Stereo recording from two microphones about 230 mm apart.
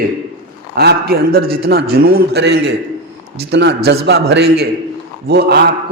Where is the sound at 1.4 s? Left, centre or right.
Right.